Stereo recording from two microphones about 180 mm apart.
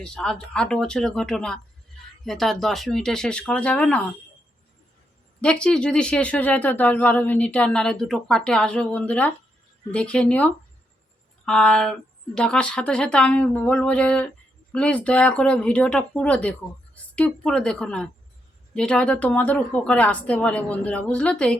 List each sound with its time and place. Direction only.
0.0 s speech: 5° left (ahead or behind)
5.4 s a woman's voice: 5° left (ahead or behind)